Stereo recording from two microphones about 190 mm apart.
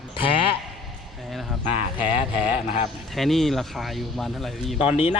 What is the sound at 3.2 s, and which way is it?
Speech, centre (ahead or behind).